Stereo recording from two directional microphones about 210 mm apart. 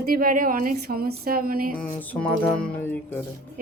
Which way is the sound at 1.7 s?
5° left (ahead or behind).